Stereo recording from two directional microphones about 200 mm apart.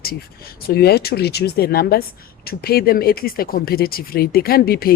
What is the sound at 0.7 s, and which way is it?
Speech, 50° left (ahead or behind).